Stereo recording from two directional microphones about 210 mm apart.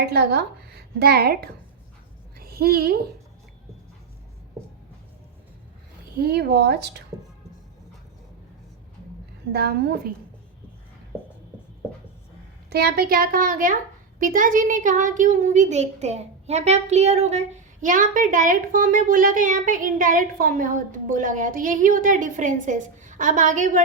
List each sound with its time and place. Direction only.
0.0 s a woman's voice: 50° right (ahead or behind)
2.4 s a sound: 45° right (ahead or behind)
6.1 s a child's voice: 50° right (ahead or behind)
9.5 s a child's voice: 50° right (ahead or behind)
12.7 s a child's voice: 50° right (ahead or behind)